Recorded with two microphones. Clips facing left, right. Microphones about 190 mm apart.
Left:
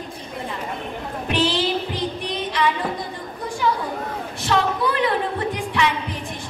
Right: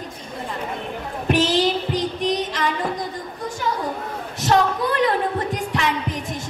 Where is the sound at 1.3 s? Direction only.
45° right (ahead or behind).